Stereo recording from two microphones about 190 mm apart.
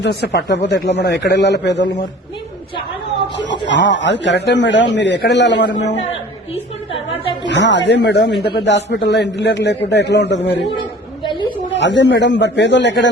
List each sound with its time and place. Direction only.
0.0 s a man's voice: 60° left (ahead or behind)
3.7 s speech: 70° left (ahead or behind)
6.1 s a sound: 30° left (ahead or behind)
7.1 s speech: 70° left (ahead or behind)
11.2 s a sound: 25° left (ahead or behind)
11.7 s speech: 70° left (ahead or behind)